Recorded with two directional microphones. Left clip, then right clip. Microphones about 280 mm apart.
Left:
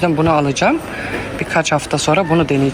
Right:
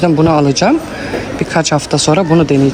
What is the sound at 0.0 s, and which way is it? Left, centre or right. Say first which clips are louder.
Speech: right 4 dB; centre.